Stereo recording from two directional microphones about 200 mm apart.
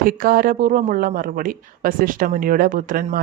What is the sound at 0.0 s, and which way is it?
Speech, 45° right (ahead or behind).